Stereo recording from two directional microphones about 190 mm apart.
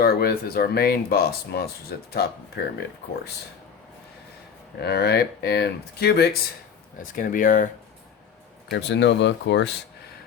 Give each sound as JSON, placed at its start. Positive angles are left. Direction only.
{"t": 0.0, "sound": "speech", "side_deg": 55}
{"t": 4.8, "sound": "speech", "side_deg": 60}
{"t": 7.2, "sound": "speech", "side_deg": 45}
{"t": 8.7, "sound": "speech", "side_deg": 65}